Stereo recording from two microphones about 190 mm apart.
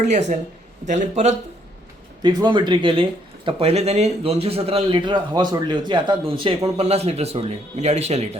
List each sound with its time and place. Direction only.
0.0 s speech: 40° right (ahead or behind)
2.2 s speech: 25° right (ahead or behind)